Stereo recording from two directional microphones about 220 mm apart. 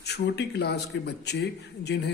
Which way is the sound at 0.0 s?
50° left (ahead or behind).